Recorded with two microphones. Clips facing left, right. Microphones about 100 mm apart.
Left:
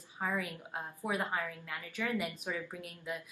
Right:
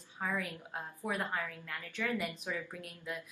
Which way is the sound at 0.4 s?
10° left (ahead or behind).